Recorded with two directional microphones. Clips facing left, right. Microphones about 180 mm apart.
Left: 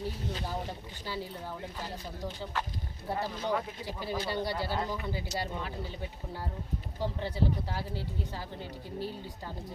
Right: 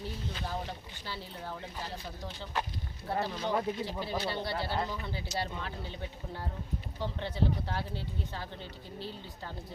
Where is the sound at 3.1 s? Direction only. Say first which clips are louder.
Even; 10° left (ahead or behind).